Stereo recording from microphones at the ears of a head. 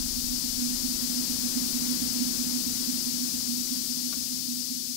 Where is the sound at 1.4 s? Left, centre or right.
Centre.